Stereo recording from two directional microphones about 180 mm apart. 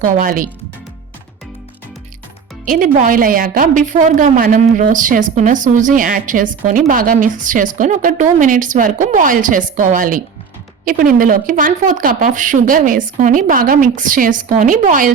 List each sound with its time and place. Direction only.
0.0 s a woman's voice: 50° right (ahead or behind)
2.6 s a woman's voice: 50° right (ahead or behind)